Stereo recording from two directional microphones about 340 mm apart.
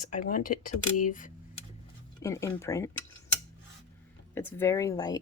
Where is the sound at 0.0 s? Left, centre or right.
Left.